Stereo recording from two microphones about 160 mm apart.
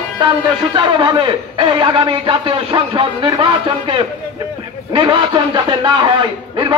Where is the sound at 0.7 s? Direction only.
30° right (ahead or behind).